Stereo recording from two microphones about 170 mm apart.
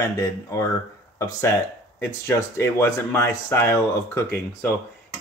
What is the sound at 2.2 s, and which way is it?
Speech, 15° left (ahead or behind).